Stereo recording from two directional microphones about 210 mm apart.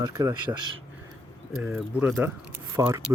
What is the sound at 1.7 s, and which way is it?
Speech, 5° right (ahead or behind).